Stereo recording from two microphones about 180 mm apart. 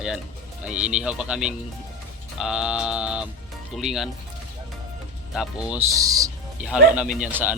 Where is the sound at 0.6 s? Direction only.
5° right (ahead or behind).